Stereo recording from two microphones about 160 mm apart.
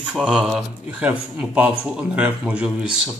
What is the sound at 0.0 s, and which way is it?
Speech, 5° right (ahead or behind).